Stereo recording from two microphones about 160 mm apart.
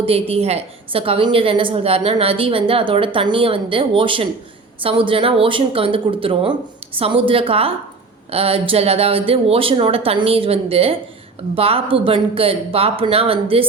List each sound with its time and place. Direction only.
0.0 s a woman's voice: 40° right (ahead or behind)